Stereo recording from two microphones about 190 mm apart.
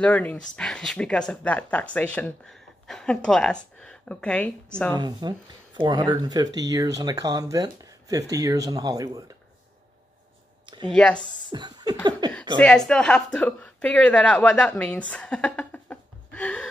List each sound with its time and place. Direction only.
0.0 s speech: 5° left (ahead or behind)
4.9 s speech: 20° right (ahead or behind)
10.9 s speech: 5° left (ahead or behind)
11.5 s speech: 20° right (ahead or behind)
12.5 s speech: 5° left (ahead or behind)